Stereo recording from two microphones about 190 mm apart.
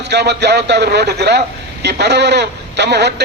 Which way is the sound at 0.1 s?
60° right (ahead or behind).